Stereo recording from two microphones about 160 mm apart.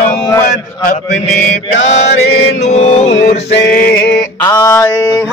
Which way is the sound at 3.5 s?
80° left.